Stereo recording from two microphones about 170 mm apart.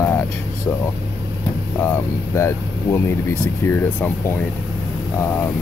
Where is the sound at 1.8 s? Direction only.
15° left (ahead or behind).